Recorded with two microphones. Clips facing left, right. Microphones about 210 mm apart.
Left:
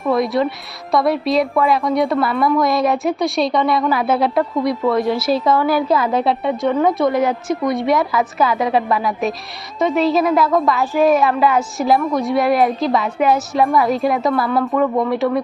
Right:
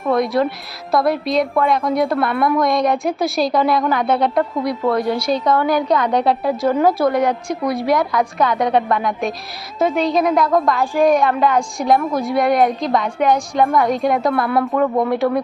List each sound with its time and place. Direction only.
0.0 s a woman's voice: centre (ahead or behind)